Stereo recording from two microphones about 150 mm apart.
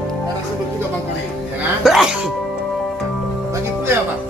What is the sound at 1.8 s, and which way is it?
Music, centre (ahead or behind).